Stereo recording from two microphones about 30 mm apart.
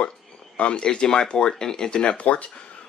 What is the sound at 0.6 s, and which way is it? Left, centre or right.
Speech, left.